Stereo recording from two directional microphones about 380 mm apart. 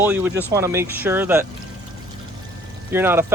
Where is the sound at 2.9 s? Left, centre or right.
Centre.